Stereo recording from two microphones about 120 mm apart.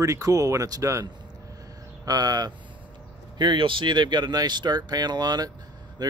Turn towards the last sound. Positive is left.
turn(degrees=-35)  # may be behind; listen again after turning